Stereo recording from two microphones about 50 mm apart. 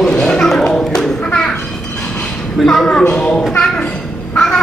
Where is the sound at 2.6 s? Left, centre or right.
Centre.